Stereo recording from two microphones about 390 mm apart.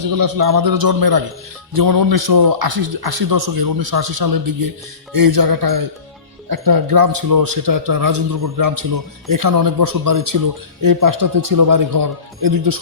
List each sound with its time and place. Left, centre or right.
0.0 s a man's voice: right